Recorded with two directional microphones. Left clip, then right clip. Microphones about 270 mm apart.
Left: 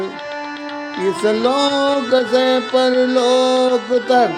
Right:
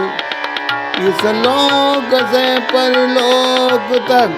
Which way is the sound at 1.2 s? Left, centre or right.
Right.